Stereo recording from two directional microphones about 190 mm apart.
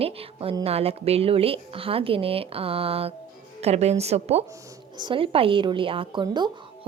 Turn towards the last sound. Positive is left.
turn(degrees=-25)  # may be behind; listen again after turning